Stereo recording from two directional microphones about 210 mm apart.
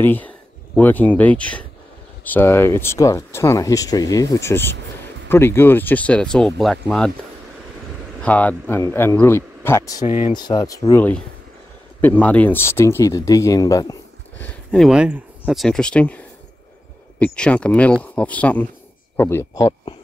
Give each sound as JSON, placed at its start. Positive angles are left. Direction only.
{"t": 0.0, "sound": "speech", "side_deg": 10}
{"t": 8.2, "sound": "speech", "side_deg": 5}
{"t": 10.0, "sound": "speech", "side_deg": 35}
{"t": 10.3, "sound": "speech", "side_deg": 20}
{"t": 14.4, "sound": "speech", "side_deg": 5}